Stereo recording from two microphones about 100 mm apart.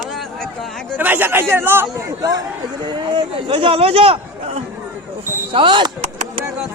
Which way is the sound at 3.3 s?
65° right (ahead or behind).